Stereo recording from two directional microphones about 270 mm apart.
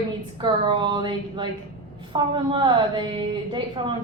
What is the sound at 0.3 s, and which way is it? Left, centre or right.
A woman's voice, centre.